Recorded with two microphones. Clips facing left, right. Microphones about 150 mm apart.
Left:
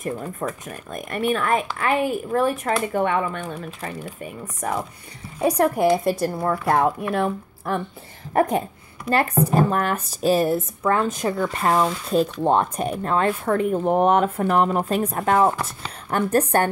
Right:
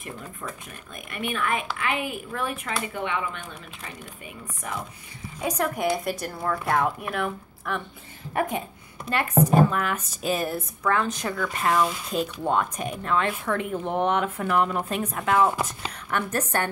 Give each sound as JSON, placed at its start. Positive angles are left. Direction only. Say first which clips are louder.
{"t": 0.0, "sound": "speech", "louder": "left 10 dB", "side_deg": 45}
{"t": 5.6, "sound": "speech", "louder": "left 7 dB", "side_deg": 30}
{"t": 15.5, "sound": "speech", "louder": "even", "side_deg": -15}
{"t": 16.1, "sound": "speech", "louder": "left 5 dB", "side_deg": 40}